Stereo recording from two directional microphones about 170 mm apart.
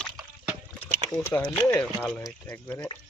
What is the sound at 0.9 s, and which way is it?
Speech, 15° left (ahead or behind).